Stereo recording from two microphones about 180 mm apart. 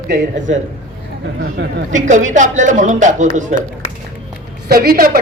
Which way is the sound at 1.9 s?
45° right (ahead or behind).